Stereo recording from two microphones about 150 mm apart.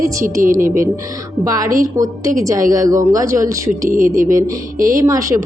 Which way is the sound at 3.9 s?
65° right (ahead or behind).